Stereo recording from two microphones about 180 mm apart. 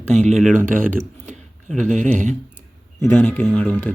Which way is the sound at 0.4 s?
45° right (ahead or behind).